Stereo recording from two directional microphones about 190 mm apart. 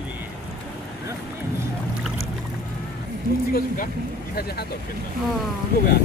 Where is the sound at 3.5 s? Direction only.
45° left (ahead or behind).